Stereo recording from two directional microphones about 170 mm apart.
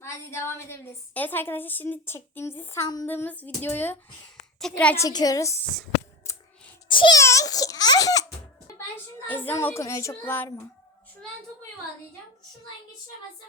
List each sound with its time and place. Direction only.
0.0 s a woman's voice: 15° left (ahead or behind)
3.1 s a woman's voice: 10° left (ahead or behind)
5.0 s a child's voice: 20° left (ahead or behind)
6.8 s a child's voice: 30° left (ahead or behind)
7.2 s a child's voice: 15° left (ahead or behind)
9.2 s a woman's voice: 10° left (ahead or behind)